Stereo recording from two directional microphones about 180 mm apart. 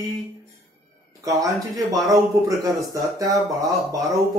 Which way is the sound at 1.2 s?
20° right (ahead or behind).